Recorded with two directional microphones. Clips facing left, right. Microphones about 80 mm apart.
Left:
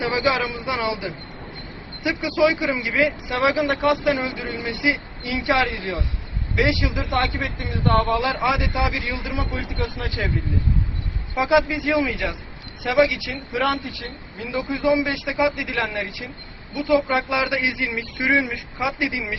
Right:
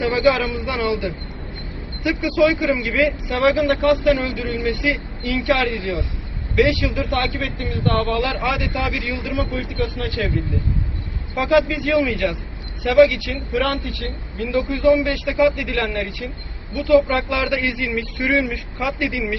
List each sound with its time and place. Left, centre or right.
0.0 s speech: centre
7.0 s speech: centre
8.1 s speech: centre
9.1 s speech: centre
11.3 s speech: centre